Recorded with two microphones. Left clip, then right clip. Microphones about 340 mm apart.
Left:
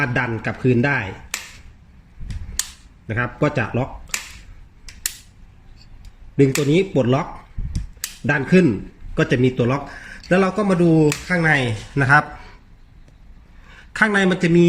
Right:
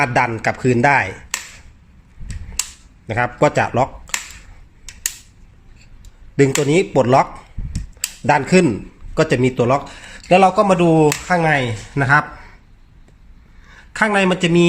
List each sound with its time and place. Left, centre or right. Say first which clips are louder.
0.0 s speech: right 6 dB; centre
3.1 s speech: right 5 dB; centre
6.3 s speech: right 2 dB; centre
8.3 s speech: right 3 dB; centre
10.6 s speech: right 4 dB; right
11.3 s a man's voice: right 2 dB; centre
13.7 s speech: right 1 dB; centre